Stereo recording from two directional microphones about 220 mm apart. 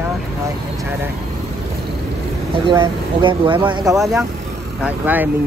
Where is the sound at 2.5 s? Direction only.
20° right (ahead or behind).